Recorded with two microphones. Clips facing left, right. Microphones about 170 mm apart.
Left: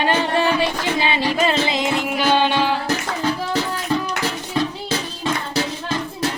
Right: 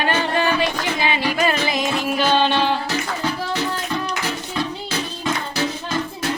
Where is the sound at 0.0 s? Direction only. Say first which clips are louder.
Left 2 dB; 25° left (ahead or behind); by 2.7 s 10° left (ahead or behind).